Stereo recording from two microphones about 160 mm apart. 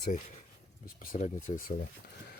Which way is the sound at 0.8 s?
55° left (ahead or behind).